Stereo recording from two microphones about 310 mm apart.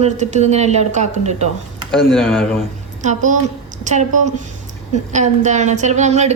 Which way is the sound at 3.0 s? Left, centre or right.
Right.